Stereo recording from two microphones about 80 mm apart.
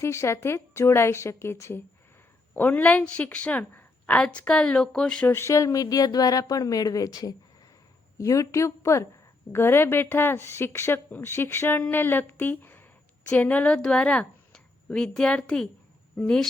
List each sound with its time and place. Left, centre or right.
0.0 s a woman's voice: left
2.6 s a woman's voice: left
5.3 s a woman's voice: left; by 16.5 s centre